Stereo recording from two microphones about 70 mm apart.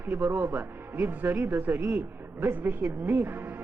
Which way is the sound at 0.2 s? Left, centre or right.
Right.